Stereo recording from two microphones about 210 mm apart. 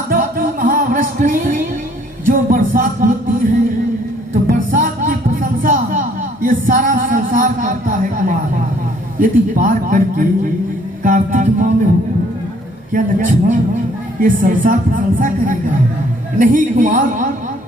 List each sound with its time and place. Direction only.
0.1 s music: 40° right (ahead or behind)
4.4 s music: 40° right (ahead or behind)
9.2 s speech: 40° right (ahead or behind)
11.0 s music: 40° right (ahead or behind)
12.9 s speech: 40° right (ahead or behind)